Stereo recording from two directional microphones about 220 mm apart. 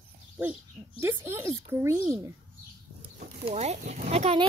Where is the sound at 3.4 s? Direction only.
30° right (ahead or behind).